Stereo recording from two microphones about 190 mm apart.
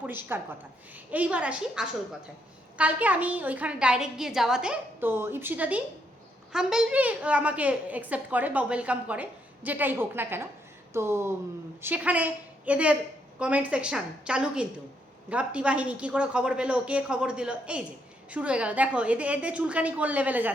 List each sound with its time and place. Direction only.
0.0 s a woman's voice: 10° right (ahead or behind)